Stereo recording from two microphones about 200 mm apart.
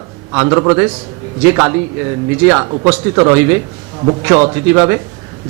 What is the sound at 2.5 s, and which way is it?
A man's voice, 20° right (ahead or behind).